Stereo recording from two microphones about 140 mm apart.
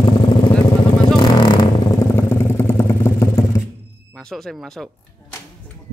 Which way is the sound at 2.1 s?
15° left (ahead or behind).